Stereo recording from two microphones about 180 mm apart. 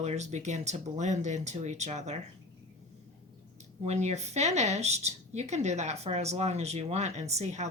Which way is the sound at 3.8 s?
35° right (ahead or behind).